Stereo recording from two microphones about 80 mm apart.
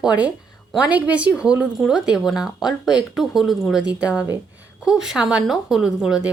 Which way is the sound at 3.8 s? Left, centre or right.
Centre.